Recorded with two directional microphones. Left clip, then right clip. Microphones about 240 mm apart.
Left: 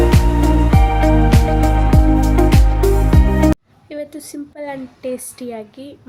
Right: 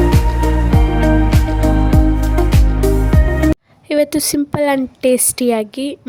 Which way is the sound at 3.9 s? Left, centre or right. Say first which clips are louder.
Right 14 dB; right.